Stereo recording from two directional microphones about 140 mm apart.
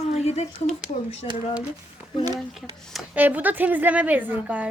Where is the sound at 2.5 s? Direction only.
Centre (ahead or behind).